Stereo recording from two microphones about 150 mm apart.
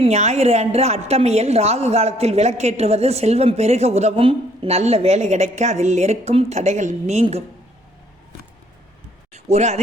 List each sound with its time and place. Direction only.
0.0 s a woman's voice: 45° right (ahead or behind)
9.3 s speech: 50° right (ahead or behind)